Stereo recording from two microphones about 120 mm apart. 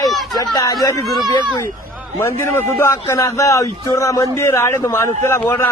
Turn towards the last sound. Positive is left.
turn(degrees=20)  # may be behind; listen again after turning